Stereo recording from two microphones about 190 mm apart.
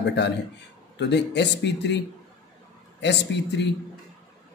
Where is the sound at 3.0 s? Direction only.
65° left (ahead or behind).